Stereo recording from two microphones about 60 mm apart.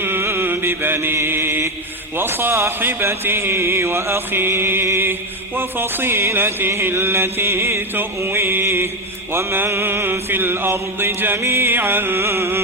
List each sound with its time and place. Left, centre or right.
0.0 s mantra: right
2.1 s music: right
9.3 s mantra: right